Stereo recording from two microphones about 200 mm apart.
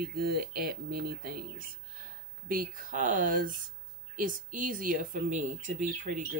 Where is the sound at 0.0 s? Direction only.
50° right (ahead or behind).